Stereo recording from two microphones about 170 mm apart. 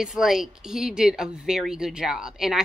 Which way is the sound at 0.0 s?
Centre (ahead or behind).